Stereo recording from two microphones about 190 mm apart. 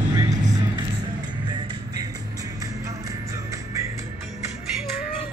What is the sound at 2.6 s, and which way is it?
Music, 15° right (ahead or behind).